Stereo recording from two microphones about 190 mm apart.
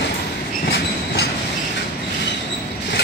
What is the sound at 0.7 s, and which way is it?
Train, 60° left (ahead or behind).